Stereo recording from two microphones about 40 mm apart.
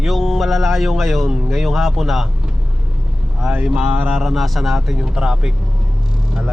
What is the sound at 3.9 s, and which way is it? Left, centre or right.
Speech, right.